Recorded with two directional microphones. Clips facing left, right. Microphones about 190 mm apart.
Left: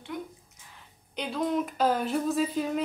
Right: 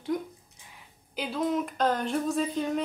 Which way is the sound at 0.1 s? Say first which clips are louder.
Right 2 dB; 40° right (ahead or behind).